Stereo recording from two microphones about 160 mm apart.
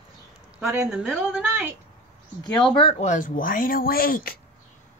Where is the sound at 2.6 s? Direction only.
30° left (ahead or behind); by 4.3 s 65° left (ahead or behind).